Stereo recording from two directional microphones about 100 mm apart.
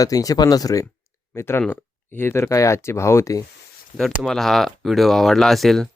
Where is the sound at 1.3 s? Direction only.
25° left (ahead or behind).